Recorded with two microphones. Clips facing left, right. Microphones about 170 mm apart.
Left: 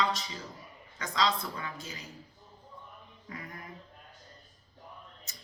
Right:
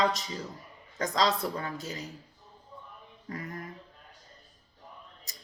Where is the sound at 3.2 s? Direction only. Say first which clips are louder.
Right 6 dB; 45° right (ahead or behind).